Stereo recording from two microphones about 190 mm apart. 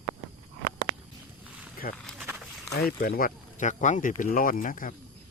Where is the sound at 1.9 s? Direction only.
5° left (ahead or behind).